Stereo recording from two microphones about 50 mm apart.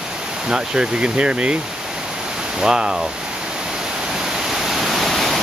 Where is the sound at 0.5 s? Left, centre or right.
Centre.